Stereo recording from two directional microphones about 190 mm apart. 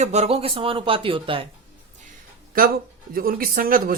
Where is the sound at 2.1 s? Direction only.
50° right (ahead or behind).